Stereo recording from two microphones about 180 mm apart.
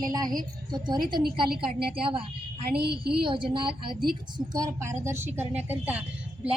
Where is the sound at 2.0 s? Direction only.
30° right (ahead or behind).